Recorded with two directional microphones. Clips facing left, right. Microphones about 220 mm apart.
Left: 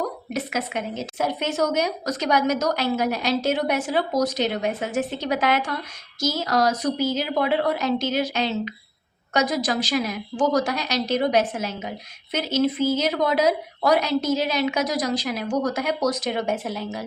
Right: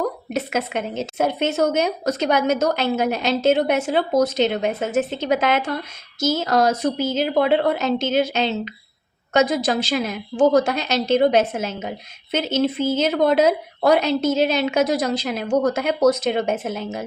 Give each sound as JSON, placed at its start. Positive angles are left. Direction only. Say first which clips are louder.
{"t": 0.0, "sound": "a woman's voice", "louder": "right 3 dB", "side_deg": -25}